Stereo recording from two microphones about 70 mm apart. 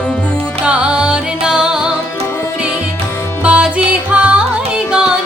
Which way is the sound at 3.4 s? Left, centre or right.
Centre.